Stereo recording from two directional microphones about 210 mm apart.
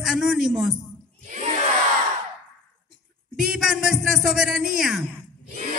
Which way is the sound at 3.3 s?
Centre (ahead or behind).